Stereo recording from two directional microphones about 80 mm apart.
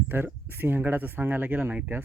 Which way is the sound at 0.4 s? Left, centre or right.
Right.